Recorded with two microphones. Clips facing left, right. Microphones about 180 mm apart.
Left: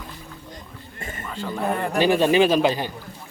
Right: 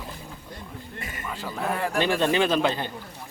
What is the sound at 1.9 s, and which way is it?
Speech, 10° left (ahead or behind).